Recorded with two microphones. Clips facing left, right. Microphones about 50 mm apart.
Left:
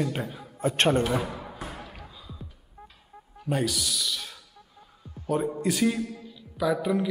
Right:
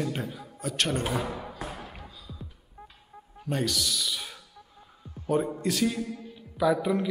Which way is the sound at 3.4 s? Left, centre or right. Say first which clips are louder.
Left 1 dB; centre.